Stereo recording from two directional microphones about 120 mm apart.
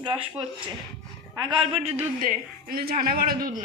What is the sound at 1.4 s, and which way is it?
Speech, 45° right (ahead or behind).